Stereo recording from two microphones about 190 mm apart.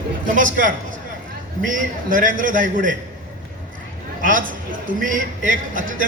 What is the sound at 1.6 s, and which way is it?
Speech, 45° right (ahead or behind).